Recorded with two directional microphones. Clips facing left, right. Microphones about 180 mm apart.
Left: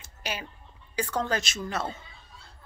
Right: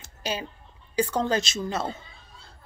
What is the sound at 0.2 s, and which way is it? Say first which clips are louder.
A woman's voice: right 5 dB; 30° right (ahead or behind).